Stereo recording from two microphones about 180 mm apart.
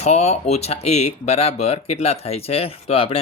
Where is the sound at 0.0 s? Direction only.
35° left (ahead or behind).